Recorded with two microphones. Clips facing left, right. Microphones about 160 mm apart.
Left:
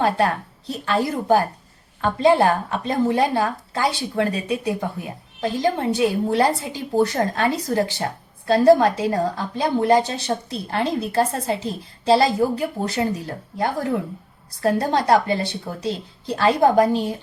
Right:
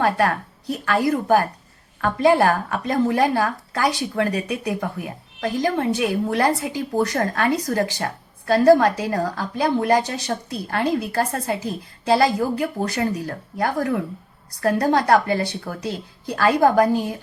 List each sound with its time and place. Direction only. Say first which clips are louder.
0.0 s a woman's voice: even; 25° left (ahead or behind)